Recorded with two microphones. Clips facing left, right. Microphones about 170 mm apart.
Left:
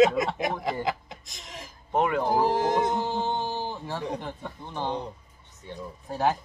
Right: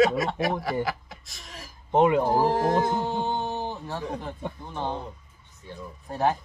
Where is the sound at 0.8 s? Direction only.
20° left (ahead or behind).